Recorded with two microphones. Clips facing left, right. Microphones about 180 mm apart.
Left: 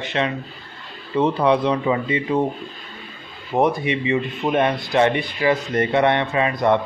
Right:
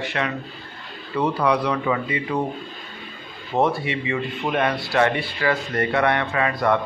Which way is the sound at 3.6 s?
15° left (ahead or behind).